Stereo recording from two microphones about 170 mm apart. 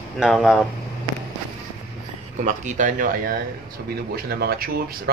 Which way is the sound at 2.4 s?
50° right (ahead or behind).